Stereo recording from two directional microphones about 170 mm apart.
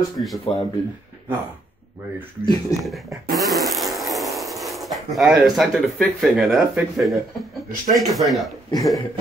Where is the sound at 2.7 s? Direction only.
20° left (ahead or behind).